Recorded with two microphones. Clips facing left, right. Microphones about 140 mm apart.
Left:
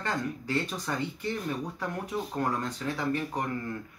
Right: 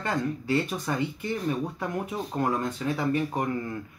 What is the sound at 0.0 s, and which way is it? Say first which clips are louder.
Speech: right 3 dB; 15° right (ahead or behind).